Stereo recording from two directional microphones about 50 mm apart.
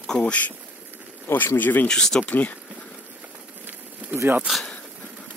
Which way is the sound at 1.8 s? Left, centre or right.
Centre.